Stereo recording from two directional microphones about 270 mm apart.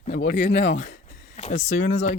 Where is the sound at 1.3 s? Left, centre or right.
Left.